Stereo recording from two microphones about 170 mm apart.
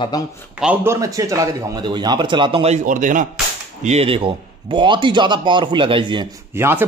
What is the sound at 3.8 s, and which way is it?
A man's voice, 35° right (ahead or behind).